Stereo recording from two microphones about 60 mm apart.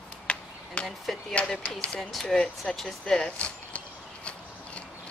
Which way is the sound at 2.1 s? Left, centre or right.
Centre.